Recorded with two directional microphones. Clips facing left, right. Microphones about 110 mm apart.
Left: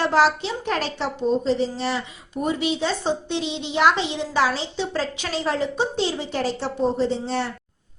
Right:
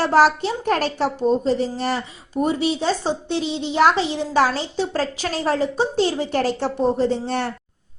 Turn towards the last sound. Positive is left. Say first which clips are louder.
# right 2 dB
turn(degrees=-55)  # may be behind; listen again after turning